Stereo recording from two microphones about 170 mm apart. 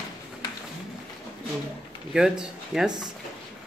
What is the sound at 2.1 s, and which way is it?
Speech, 5° right (ahead or behind).